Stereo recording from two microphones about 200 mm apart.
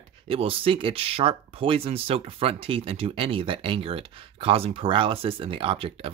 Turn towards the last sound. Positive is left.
turn(degrees=-30)  # may be behind; listen again after turning